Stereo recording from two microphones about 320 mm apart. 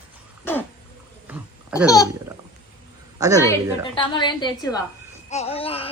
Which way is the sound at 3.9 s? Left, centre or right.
Centre.